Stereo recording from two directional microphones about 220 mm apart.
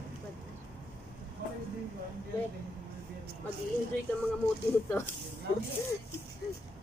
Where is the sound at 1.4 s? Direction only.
45° right (ahead or behind).